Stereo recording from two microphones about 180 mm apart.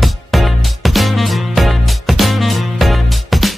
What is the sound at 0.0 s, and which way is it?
Music, centre (ahead or behind).